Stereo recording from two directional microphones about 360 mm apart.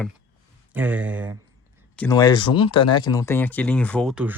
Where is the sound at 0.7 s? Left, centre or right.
Centre.